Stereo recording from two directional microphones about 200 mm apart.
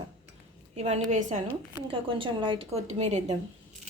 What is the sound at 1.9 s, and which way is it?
A woman's voice, 25° right (ahead or behind).